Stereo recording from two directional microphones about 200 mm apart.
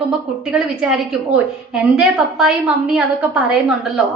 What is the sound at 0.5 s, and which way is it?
A woman's voice, 5° right (ahead or behind).